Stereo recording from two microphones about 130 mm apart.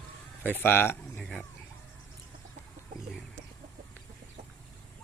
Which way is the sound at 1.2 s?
5° left (ahead or behind).